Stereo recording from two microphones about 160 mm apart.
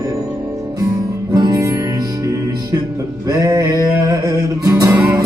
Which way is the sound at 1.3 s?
25° right (ahead or behind).